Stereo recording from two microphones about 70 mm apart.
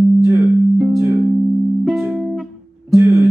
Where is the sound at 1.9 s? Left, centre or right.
Centre.